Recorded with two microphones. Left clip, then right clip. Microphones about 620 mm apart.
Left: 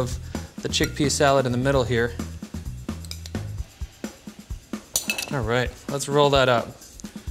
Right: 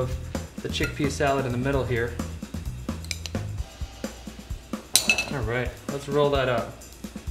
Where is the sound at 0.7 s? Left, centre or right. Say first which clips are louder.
Left 5 dB; right.